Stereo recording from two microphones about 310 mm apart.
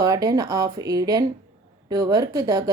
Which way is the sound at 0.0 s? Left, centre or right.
Centre.